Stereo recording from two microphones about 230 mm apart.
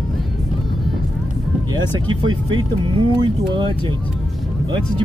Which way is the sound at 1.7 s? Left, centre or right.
Centre.